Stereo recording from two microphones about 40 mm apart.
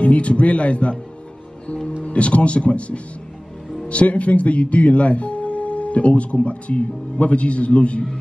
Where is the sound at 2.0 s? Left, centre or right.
Left.